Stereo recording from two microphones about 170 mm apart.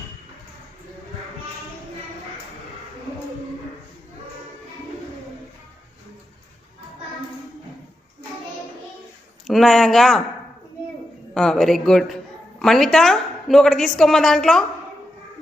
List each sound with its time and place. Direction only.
9.5 s a woman's voice: centre (ahead or behind)
11.3 s a woman's voice: centre (ahead or behind)